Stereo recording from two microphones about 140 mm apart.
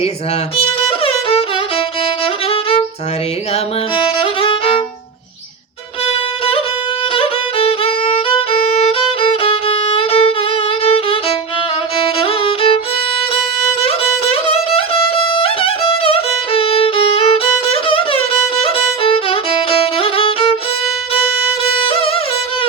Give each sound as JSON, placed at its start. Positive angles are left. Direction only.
{"t": 0.5, "sound": "music", "side_deg": 40}
{"t": 2.2, "sound": "violin", "side_deg": 40}
{"t": 4.2, "sound": "violin", "side_deg": 40}
{"t": 6.1, "sound": "violin", "side_deg": 40}
{"t": 13.8, "sound": "music", "side_deg": 45}
{"t": 19.8, "sound": "violin", "side_deg": 40}
{"t": 21.6, "sound": "music", "side_deg": 40}